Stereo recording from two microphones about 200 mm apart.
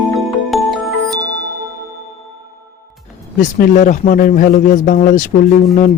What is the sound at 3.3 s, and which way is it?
Speech, 40° left (ahead or behind).